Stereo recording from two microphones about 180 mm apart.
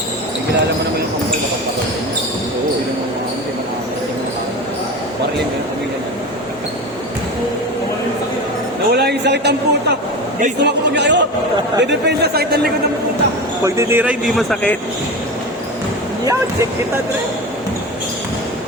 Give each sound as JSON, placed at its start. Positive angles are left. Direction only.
{"t": 9.0, "sound": "a sound", "side_deg": -70}
{"t": 10.6, "sound": "a man's voice", "side_deg": -75}
{"t": 13.7, "sound": "a man's voice", "side_deg": -15}